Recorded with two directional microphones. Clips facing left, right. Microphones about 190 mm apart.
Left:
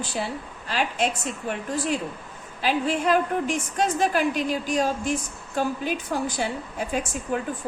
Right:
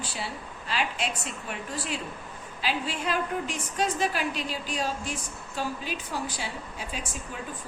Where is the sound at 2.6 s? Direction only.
50° left (ahead or behind).